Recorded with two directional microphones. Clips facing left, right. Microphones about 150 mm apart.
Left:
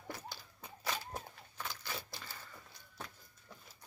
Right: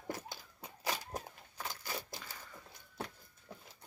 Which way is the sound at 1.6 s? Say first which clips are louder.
Right 1 dB; 45° right (ahead or behind).